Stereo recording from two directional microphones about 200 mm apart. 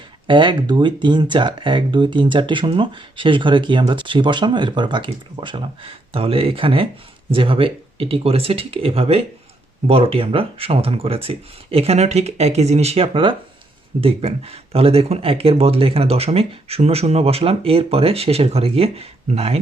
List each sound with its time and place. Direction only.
0.3 s speech: 25° right (ahead or behind)